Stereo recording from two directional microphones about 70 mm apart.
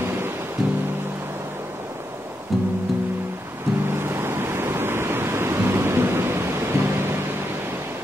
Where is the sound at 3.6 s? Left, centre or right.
Right.